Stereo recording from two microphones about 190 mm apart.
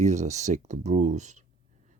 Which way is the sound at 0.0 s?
35° right (ahead or behind).